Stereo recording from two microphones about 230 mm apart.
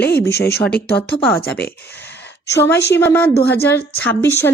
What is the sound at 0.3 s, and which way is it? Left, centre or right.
Speech, left.